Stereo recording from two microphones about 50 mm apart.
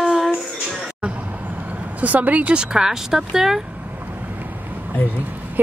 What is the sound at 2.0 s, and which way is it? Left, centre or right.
Speech, right.